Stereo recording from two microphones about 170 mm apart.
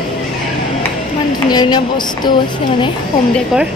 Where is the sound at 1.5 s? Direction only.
25° left (ahead or behind).